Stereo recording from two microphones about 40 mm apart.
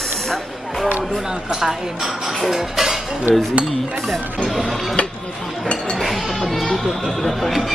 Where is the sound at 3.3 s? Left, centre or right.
Right.